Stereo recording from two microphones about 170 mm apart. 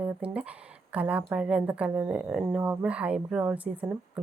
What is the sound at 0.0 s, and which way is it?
Speech, 10° right (ahead or behind).